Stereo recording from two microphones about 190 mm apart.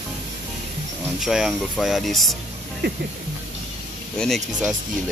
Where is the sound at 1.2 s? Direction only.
Centre (ahead or behind).